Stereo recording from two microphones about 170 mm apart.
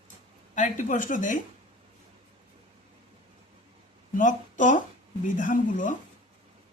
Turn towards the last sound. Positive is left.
turn(degrees=50)  # may be behind; listen again after turning